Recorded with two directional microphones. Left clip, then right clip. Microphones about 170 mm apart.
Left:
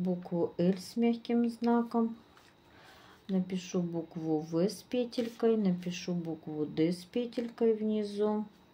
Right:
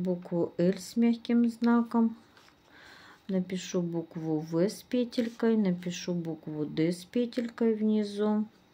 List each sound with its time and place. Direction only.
0.0 s speech: 35° right (ahead or behind)
3.3 s speech: 35° right (ahead or behind)